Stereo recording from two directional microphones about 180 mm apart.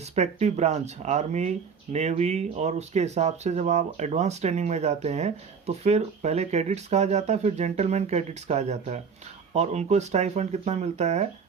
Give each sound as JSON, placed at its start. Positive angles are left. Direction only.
{"t": 0.2, "sound": "speech", "side_deg": -40}